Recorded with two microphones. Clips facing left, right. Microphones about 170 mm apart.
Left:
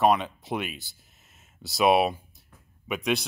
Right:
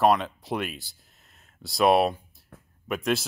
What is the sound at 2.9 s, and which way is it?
Speech, centre (ahead or behind).